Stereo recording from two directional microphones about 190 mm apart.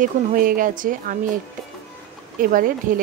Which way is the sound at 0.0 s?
45° right (ahead or behind).